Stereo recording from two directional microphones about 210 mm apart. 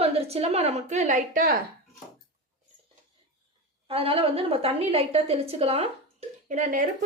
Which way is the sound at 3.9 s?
25° right (ahead or behind).